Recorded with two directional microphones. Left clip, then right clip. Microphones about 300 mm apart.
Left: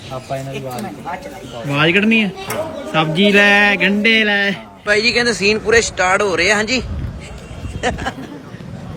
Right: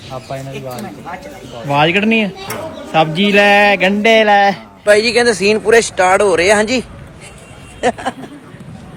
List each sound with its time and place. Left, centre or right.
0.1 s speech: centre